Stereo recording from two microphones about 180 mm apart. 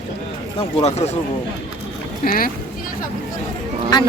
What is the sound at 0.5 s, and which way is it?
Speech, 35° left (ahead or behind).